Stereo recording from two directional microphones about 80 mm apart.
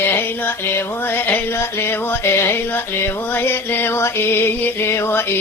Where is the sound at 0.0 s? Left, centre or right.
Left.